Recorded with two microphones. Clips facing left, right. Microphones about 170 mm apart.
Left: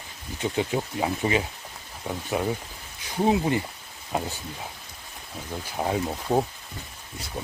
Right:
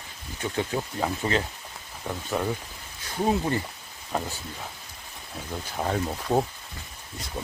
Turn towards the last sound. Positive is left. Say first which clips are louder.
# even
turn(degrees=10)  # may be behind; listen again after turning